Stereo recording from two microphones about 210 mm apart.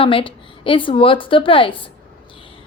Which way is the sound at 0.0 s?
25° left (ahead or behind).